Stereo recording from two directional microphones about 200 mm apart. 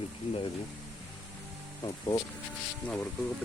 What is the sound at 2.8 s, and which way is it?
Speech, centre (ahead or behind).